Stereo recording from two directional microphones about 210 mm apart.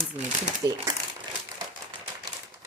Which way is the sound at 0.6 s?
15° right (ahead or behind).